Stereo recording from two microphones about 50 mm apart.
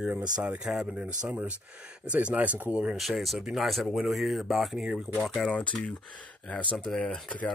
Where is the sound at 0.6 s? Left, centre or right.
Centre.